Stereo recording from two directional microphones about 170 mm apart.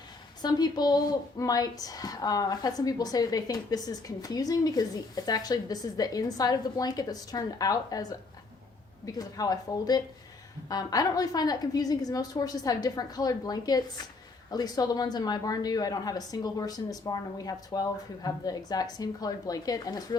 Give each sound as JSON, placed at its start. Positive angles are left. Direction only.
{"t": 0.4, "sound": "a woman's voice", "side_deg": 25}
{"t": 9.1, "sound": "a woman's voice", "side_deg": 20}